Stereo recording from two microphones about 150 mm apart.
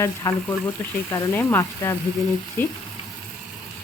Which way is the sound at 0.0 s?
20° left (ahead or behind).